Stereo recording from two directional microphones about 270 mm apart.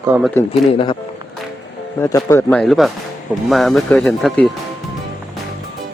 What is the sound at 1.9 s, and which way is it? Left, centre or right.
Speech, centre.